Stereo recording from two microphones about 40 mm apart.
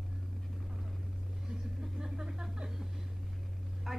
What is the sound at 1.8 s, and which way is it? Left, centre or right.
Vehicle, centre.